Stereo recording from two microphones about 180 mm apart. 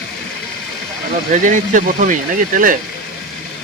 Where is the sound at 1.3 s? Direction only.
45° right (ahead or behind).